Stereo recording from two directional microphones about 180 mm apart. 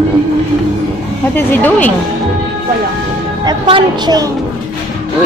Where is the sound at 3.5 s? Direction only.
25° right (ahead or behind).